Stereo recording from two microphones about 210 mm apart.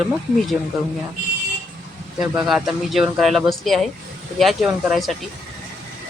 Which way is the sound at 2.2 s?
5° right (ahead or behind).